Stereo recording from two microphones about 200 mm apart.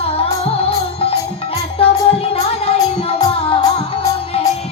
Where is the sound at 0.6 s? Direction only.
30° left (ahead or behind).